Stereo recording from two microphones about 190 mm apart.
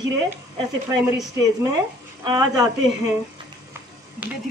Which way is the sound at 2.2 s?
20° right (ahead or behind).